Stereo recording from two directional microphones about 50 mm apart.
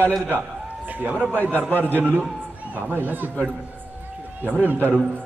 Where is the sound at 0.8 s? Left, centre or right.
Right.